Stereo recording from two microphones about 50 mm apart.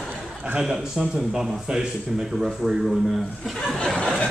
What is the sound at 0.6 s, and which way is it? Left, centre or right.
A man's voice, centre.